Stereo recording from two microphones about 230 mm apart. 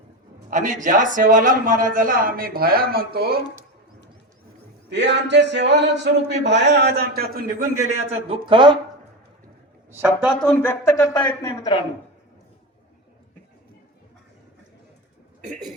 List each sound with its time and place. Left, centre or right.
0.5 s a man's voice: right
4.9 s speech: right
7.9 s a man's voice: right
9.9 s a woman's voice: centre
10.4 s speech: centre